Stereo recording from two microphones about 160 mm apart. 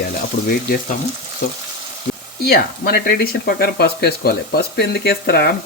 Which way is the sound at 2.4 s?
75° left (ahead or behind).